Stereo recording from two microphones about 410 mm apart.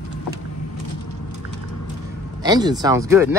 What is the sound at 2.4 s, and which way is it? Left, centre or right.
Speech, centre.